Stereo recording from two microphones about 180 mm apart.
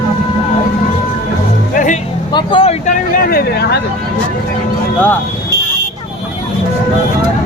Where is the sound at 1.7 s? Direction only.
45° left (ahead or behind).